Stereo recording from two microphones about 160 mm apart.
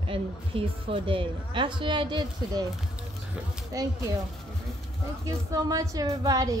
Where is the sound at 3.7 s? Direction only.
20° right (ahead or behind).